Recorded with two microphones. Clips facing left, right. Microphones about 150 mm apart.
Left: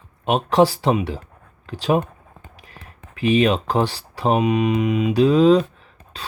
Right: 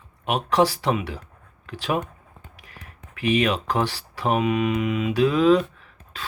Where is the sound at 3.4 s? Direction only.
25° left (ahead or behind).